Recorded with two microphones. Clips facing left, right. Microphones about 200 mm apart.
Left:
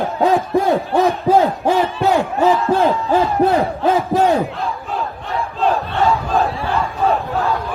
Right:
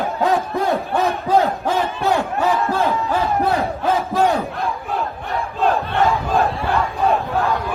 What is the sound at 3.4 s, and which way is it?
Battle cry, 30° left (ahead or behind).